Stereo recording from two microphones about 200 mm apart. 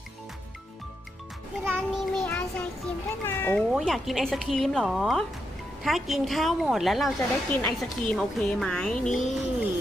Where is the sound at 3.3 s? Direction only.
10° left (ahead or behind).